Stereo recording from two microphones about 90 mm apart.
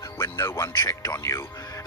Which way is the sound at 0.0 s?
30° left (ahead or behind).